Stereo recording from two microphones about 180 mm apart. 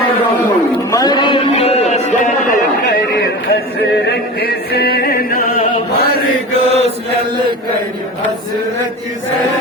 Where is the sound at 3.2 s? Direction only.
65° left (ahead or behind).